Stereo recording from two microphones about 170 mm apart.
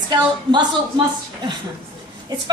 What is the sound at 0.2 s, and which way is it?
Speech, 25° right (ahead or behind).